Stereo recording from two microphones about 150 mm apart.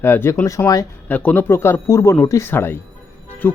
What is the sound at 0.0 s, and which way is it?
Speech, 15° left (ahead or behind).